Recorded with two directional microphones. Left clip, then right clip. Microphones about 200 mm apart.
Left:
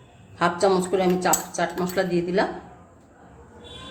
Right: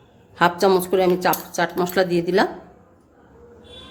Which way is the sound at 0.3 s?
50° right (ahead or behind).